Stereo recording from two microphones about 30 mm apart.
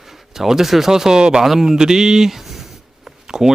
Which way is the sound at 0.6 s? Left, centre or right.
Centre.